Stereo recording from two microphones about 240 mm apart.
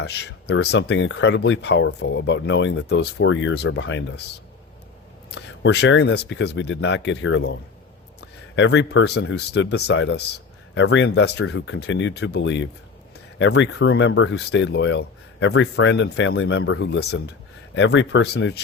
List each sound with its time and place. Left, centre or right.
0.0 s speech: left
5.3 s speech: left
8.5 s speech: left